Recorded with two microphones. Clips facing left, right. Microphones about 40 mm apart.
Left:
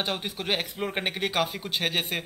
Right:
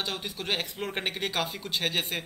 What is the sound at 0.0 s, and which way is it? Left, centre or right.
Speech, left.